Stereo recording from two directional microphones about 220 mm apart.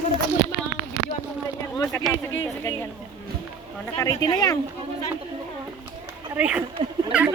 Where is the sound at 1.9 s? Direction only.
10° left (ahead or behind).